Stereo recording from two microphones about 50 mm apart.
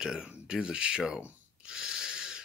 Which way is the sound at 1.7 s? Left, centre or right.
Centre.